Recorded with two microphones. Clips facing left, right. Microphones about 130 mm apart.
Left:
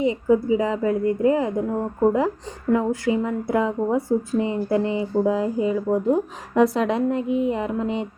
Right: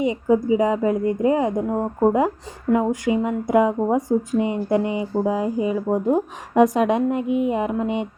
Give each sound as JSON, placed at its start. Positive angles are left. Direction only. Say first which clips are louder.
{"t": 0.0, "sound": "speech", "louder": "even", "side_deg": -20}
{"t": 5.9, "sound": "speech", "louder": "right 1 dB", "side_deg": -30}
{"t": 6.5, "sound": "speech", "louder": "right 3 dB", "side_deg": -15}
{"t": 7.2, "sound": "a sound", "louder": "right 1 dB", "side_deg": 30}
{"t": 7.5, "sound": "speech", "louder": "right 2 dB", "side_deg": -15}